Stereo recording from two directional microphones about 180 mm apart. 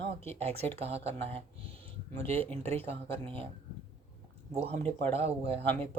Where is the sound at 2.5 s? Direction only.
35° right (ahead or behind).